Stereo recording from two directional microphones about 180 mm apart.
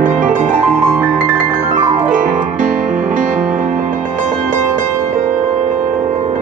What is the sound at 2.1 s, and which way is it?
Music, 45° right (ahead or behind).